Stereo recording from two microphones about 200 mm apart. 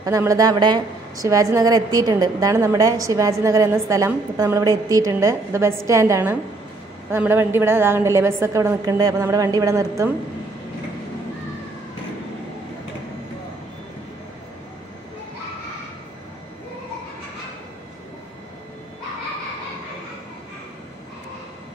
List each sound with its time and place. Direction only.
0.0 s a woman's voice: 15° right (ahead or behind)